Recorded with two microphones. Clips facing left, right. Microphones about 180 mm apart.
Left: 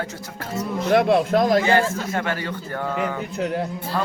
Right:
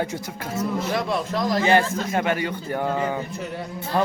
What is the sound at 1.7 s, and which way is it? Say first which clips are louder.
Speech: even; 15° right (ahead or behind).